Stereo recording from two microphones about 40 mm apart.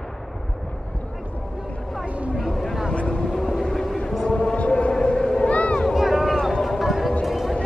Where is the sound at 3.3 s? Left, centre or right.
Centre.